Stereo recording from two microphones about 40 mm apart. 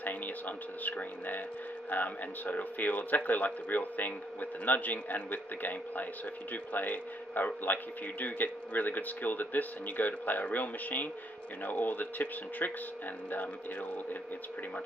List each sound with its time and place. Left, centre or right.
0.0 s a man's voice: left